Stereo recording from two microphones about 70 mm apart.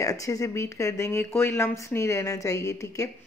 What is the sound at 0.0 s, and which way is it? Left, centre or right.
Speech, left.